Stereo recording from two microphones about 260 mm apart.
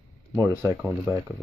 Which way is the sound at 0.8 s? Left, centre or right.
Centre.